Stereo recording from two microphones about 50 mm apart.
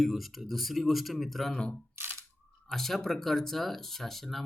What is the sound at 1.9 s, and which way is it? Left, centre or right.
Camera, right.